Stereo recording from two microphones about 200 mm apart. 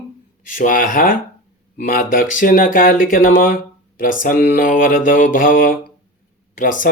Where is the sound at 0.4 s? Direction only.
40° left (ahead or behind).